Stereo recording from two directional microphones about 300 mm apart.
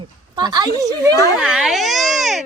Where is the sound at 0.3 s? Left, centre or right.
Centre.